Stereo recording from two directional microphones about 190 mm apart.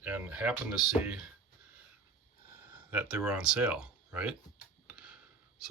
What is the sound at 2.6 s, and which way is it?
Speech, 10° right (ahead or behind).